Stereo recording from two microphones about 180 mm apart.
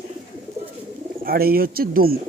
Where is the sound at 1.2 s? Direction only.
55° right (ahead or behind).